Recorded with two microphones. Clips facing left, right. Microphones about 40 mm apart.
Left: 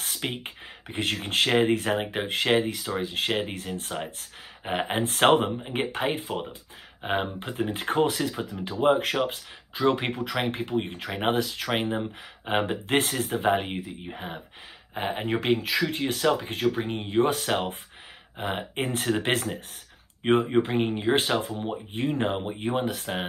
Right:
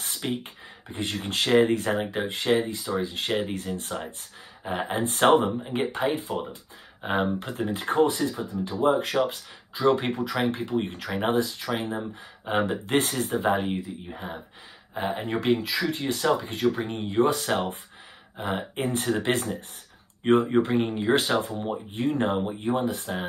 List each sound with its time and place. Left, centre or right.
0.2 s speech: left
1.2 s speech: left
3.3 s speech: left
3.6 s speech: left
5.2 s speech: left
7.1 s speech: left
11.3 s speech: left